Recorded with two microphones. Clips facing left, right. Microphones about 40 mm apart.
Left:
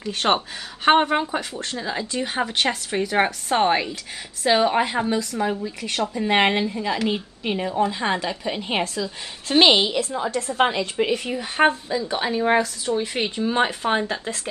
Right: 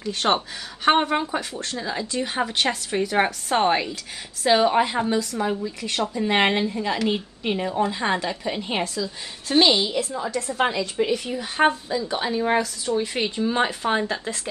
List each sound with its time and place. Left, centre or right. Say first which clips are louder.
0.0 s speech: left 1 dB; centre
5.6 s speech: even; left
6.1 s a woman's voice: left 1 dB; centre
8.8 s a woman's voice: left 1 dB; left
9.7 s a woman's voice: left 3 dB; left
10.3 s a woman's voice: left 2 dB; left
11.3 s speech: left 1 dB; left
13.1 s speech: left 1 dB; centre